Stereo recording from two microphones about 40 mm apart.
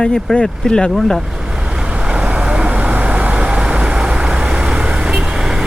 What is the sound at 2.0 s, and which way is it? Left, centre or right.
Vehicle, right.